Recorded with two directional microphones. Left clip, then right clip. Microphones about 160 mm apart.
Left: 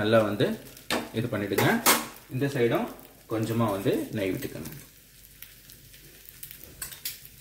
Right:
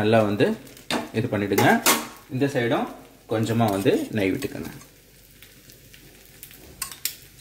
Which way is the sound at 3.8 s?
45° right (ahead or behind).